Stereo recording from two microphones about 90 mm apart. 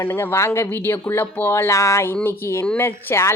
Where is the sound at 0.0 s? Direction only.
25° left (ahead or behind).